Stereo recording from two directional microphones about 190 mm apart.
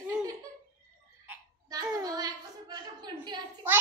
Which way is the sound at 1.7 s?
20° right (ahead or behind).